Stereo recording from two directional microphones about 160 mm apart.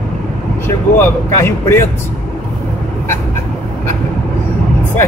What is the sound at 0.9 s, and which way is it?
Speech, 15° left (ahead or behind).